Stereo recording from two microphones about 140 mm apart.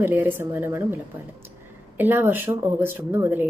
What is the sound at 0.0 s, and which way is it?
Speech, 15° right (ahead or behind).